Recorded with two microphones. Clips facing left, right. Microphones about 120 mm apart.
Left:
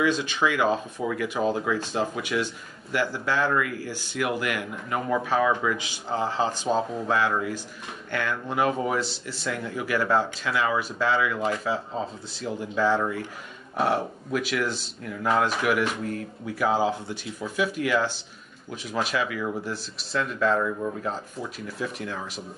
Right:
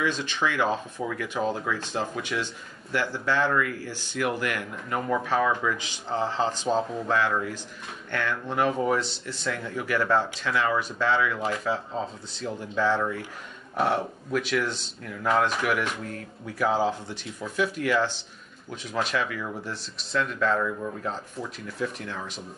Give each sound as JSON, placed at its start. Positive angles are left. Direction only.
{"t": 0.0, "sound": "speech", "side_deg": 10}